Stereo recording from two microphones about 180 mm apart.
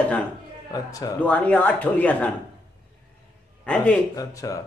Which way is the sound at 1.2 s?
10° left (ahead or behind).